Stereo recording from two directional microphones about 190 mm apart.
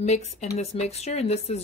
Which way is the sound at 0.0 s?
35° left (ahead or behind).